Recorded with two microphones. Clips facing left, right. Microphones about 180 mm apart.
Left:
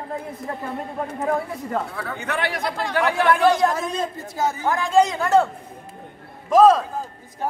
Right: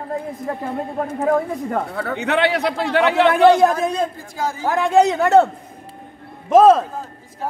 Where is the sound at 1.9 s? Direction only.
65° right (ahead or behind).